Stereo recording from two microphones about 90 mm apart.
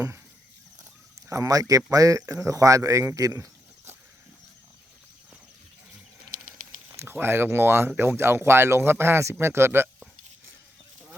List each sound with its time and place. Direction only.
1.3 s speech: 40° right (ahead or behind)
6.9 s speech: 30° right (ahead or behind)